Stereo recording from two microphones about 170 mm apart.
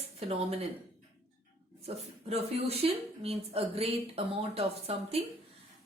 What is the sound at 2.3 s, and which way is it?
A woman's voice, 35° right (ahead or behind).